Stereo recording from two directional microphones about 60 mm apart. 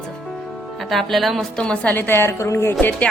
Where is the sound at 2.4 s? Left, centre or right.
Left.